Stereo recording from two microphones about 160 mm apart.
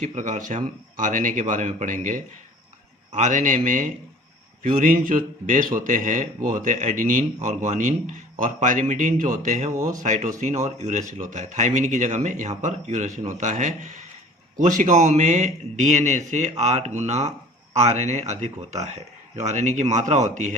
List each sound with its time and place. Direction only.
0.0 s a man's voice: 50° right (ahead or behind)
9.7 s speech: 20° right (ahead or behind)
10.0 s a man's voice: 50° right (ahead or behind)